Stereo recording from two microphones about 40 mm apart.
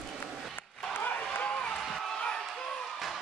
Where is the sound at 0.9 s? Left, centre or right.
Left.